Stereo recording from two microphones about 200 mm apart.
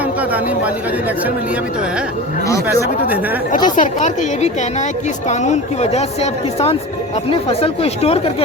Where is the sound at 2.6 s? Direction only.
10° right (ahead or behind).